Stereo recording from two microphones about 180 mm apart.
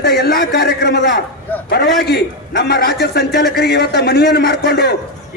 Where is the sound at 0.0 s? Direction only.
60° left (ahead or behind).